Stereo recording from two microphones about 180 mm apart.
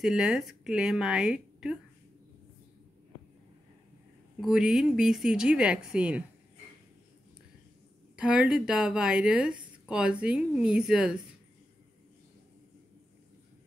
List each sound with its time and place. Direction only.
0.0 s a woman's voice: centre (ahead or behind)
4.4 s a woman's voice: 5° right (ahead or behind)
8.2 s a woman's voice: 5° right (ahead or behind)